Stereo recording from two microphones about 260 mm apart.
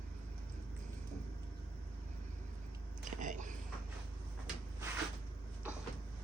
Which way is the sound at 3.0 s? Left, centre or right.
Right.